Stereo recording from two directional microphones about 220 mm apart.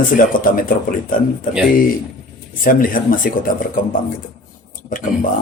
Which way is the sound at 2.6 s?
40° left (ahead or behind).